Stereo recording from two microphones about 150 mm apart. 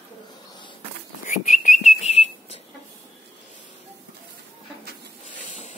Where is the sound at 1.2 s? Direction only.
55° left (ahead or behind).